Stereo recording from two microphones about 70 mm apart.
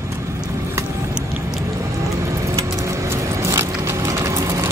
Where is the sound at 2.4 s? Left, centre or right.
Right.